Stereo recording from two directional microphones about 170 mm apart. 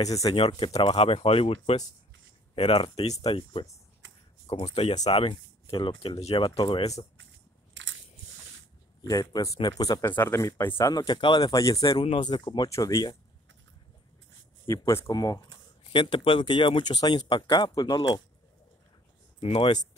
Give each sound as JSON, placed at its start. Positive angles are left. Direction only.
{"t": 0.0, "sound": "speech", "side_deg": 20}
{"t": 4.0, "sound": "a sound", "side_deg": -90}
{"t": 4.5, "sound": "speech", "side_deg": 35}
{"t": 7.8, "sound": "crushing", "side_deg": -90}
{"t": 9.0, "sound": "speech", "side_deg": 20}
{"t": 14.7, "sound": "speech", "side_deg": 20}
{"t": 19.4, "sound": "speech", "side_deg": 35}